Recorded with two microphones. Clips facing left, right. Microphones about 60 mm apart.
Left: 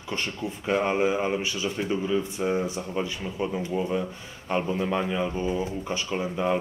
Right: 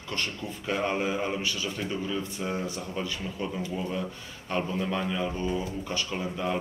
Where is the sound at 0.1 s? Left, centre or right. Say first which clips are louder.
Left 3 dB; centre.